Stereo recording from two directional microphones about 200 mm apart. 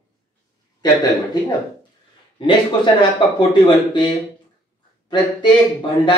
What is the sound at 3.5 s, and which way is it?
Speech, 20° left (ahead or behind).